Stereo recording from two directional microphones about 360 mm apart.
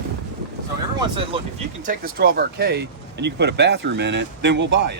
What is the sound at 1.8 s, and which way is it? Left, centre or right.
Speech, right.